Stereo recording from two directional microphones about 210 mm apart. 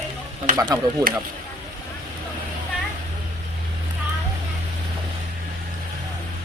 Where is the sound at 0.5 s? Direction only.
15° right (ahead or behind).